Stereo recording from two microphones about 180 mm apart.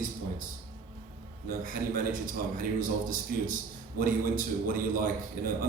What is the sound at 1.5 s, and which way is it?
A man's voice, 50° right (ahead or behind).